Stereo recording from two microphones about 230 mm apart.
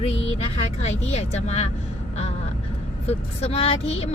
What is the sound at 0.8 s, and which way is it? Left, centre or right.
Speech, left.